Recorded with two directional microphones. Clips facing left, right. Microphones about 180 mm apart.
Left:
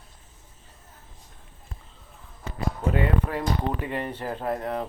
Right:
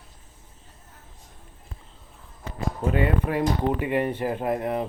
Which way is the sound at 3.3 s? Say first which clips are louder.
Right 4 dB; 10° right (ahead or behind).